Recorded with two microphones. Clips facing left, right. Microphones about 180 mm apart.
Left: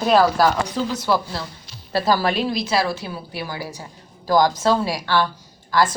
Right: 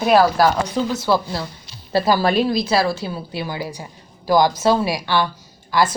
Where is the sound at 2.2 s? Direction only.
35° right (ahead or behind); by 6.0 s 10° right (ahead or behind).